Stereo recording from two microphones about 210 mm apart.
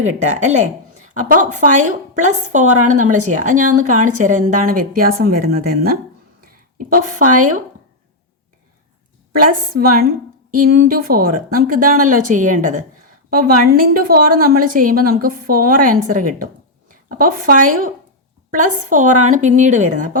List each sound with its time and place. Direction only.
0.0 s a woman's voice: 35° right (ahead or behind)
6.4 s a sound: 40° right (ahead or behind)
7.2 s speech: 90° right
9.5 s a woman's voice: 45° right (ahead or behind)